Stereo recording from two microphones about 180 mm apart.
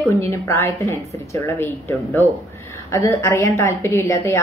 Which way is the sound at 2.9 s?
15° left (ahead or behind).